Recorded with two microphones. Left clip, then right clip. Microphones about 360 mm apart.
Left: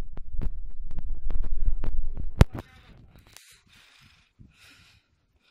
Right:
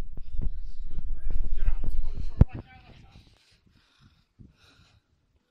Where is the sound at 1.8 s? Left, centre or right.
Left.